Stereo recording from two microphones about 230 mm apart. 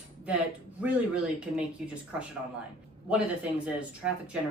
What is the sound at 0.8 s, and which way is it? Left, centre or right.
Speech, centre.